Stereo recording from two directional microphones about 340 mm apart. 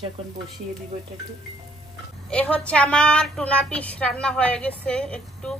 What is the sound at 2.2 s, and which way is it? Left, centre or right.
A woman's voice, centre.